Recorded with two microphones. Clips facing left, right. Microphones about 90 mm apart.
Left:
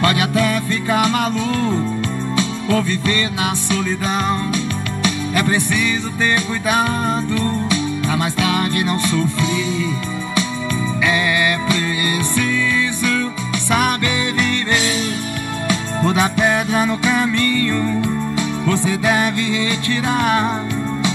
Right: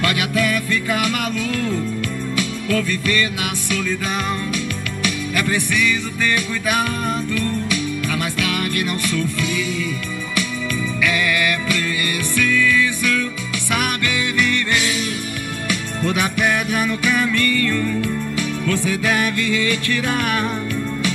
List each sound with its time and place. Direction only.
0.0 s music: 30° left (ahead or behind)
5.0 s music: 30° left (ahead or behind)
11.0 s music: 25° left (ahead or behind)